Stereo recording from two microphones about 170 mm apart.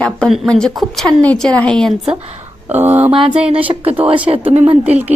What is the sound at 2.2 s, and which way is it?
Speech, 40° right (ahead or behind).